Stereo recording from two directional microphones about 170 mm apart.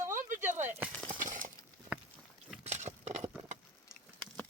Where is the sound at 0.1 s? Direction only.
50° right (ahead or behind).